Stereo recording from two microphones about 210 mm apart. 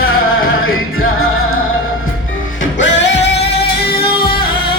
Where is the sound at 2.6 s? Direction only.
60° left (ahead or behind).